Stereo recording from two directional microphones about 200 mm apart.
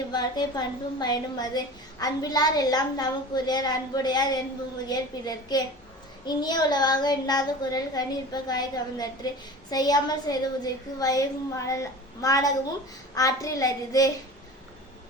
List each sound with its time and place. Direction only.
0.1 s a woman's voice: 20° left (ahead or behind)